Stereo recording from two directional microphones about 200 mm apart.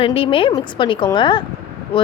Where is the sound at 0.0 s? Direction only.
25° left (ahead or behind).